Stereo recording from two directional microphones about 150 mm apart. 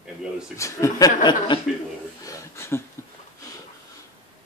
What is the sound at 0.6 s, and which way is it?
Speech, 20° left (ahead or behind).